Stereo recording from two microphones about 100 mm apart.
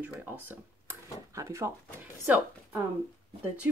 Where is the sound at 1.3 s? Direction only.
30° right (ahead or behind).